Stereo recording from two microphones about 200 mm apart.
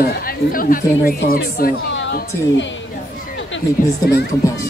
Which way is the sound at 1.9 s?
65° left (ahead or behind).